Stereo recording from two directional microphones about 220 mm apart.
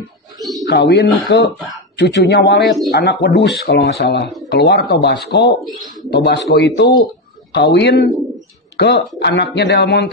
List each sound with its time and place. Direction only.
0.4 s bird: centre (ahead or behind)
0.7 s speech: 50° left (ahead or behind)